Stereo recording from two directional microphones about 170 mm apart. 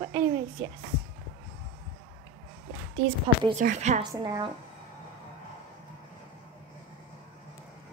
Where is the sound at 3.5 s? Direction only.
45° right (ahead or behind).